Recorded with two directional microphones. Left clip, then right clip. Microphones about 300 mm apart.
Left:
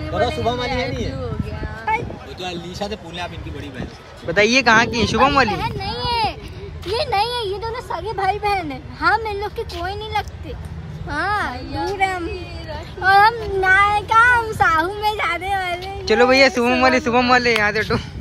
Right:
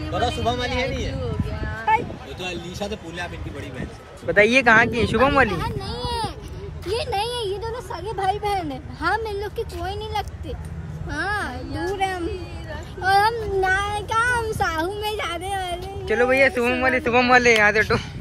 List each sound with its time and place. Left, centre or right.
0.1 s speech: left
1.9 s a sound: centre
4.3 s speech: centre
5.5 s speech: centre
6.9 s a child's voice: centre
11.1 s a child's voice: centre